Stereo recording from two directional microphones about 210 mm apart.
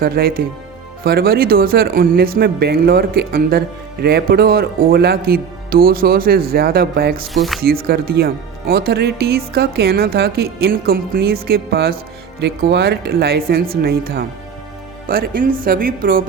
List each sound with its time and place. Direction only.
0.0 s speech: 45° right (ahead or behind)
7.3 s speech: centre (ahead or behind)
7.6 s speech: 45° right (ahead or behind)